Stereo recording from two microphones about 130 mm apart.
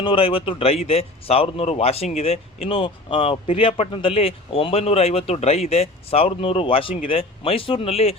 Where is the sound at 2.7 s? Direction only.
45° left (ahead or behind).